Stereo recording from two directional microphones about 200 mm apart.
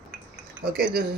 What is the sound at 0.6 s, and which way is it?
Speech, 50° right (ahead or behind).